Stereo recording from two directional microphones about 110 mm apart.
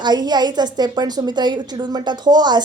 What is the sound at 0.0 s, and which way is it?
A woman's voice, 40° right (ahead or behind).